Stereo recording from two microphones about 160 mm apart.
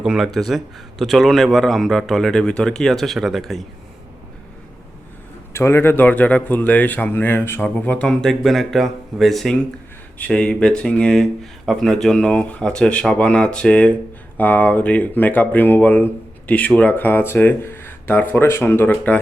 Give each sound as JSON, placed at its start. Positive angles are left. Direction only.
{"t": 0.0, "sound": "speech", "side_deg": -5}
{"t": 5.5, "sound": "speech", "side_deg": 15}